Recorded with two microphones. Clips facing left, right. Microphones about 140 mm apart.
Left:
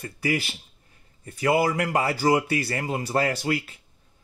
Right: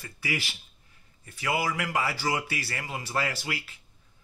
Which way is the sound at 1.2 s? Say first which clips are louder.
Left 7 dB; 40° left (ahead or behind).